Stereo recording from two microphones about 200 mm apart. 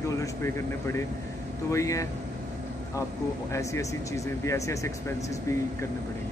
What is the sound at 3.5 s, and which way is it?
Speech, 15° left (ahead or behind).